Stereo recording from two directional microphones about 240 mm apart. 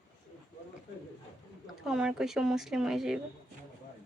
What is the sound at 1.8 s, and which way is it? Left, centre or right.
Speech, centre.